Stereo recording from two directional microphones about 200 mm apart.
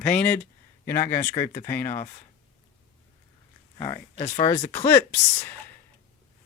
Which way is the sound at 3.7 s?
20° left (ahead or behind).